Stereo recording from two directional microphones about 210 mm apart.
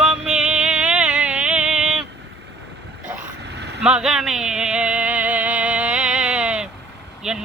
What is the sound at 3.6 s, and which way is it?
Vehicle, 55° right (ahead or behind).